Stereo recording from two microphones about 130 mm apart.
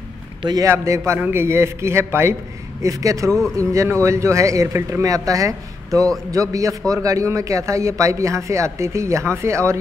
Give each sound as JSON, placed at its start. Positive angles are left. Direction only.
{"t": 0.4, "sound": "a man's voice", "side_deg": -35}
{"t": 0.7, "sound": "a man's voice", "side_deg": -20}
{"t": 3.3, "sound": "speech", "side_deg": 5}
{"t": 3.5, "sound": "a man's voice", "side_deg": -25}